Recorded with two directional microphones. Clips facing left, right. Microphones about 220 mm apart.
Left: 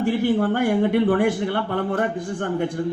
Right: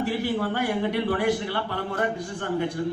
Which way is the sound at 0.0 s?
45° left (ahead or behind).